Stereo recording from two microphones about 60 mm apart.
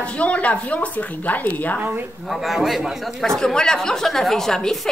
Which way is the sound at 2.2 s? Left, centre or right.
Centre.